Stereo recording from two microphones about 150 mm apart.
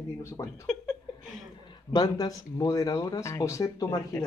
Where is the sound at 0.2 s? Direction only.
20° left (ahead or behind).